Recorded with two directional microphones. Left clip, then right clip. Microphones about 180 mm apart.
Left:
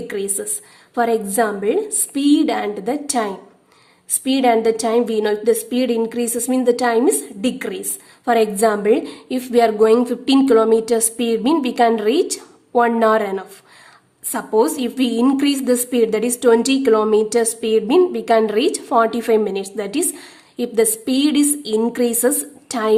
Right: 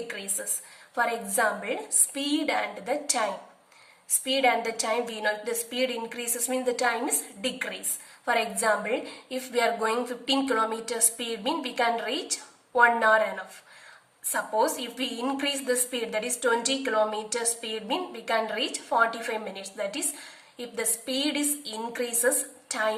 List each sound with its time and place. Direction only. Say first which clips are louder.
0.9 s a woman's voice: left 9 dB; 40° left (ahead or behind)
8.2 s a woman's voice: left 11 dB; 40° left (ahead or behind)